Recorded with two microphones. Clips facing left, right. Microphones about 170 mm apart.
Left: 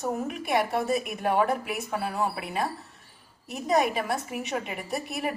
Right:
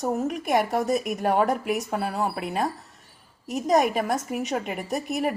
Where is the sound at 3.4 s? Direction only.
45° right (ahead or behind).